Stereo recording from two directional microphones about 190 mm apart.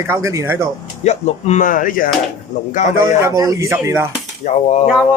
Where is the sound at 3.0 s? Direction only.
15° right (ahead or behind).